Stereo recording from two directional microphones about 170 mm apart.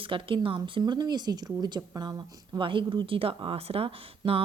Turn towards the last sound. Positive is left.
turn(degrees=-35)  # may be behind; listen again after turning